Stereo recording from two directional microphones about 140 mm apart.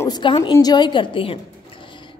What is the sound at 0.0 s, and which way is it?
A woman's voice, 30° left (ahead or behind).